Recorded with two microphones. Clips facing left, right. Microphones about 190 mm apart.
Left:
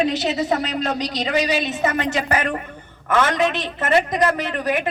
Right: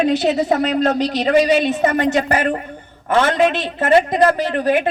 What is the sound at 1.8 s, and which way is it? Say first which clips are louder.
A woman's voice: right 5 dB; 40° right (ahead or behind).